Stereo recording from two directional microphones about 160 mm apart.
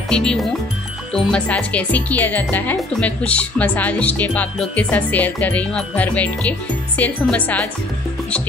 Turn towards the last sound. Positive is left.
turn(degrees=10)  # may be behind; listen again after turning